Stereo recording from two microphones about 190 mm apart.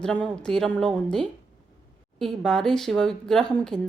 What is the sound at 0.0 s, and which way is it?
Speech, 5° left (ahead or behind).